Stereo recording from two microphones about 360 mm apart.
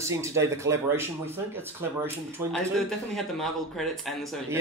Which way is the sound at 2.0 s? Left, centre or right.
Centre.